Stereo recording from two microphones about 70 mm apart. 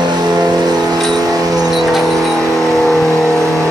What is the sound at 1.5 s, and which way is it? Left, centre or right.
Vehicle, centre.